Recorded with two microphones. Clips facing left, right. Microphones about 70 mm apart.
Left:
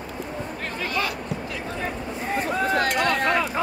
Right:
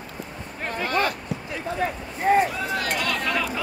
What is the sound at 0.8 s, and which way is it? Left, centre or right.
Speech, right.